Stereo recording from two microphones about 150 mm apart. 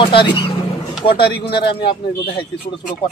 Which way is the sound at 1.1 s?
90° left.